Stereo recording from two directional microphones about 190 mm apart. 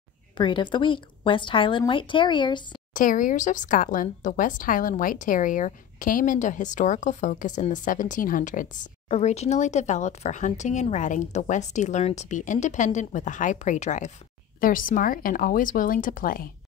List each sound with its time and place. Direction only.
0.4 s a woman's voice: 25° left (ahead or behind)
2.9 s speech: 45° left (ahead or behind)
9.1 s speech: 35° left (ahead or behind)